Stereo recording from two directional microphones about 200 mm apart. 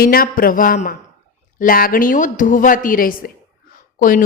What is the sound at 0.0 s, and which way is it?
A woman's voice, 50° left (ahead or behind).